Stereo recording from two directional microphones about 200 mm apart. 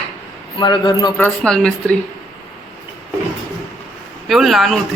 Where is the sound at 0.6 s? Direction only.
20° left (ahead or behind).